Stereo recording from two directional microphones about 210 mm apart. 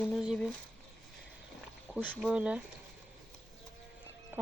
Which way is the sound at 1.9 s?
5° right (ahead or behind).